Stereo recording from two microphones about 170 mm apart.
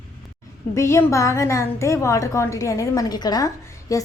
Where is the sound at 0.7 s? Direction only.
15° left (ahead or behind).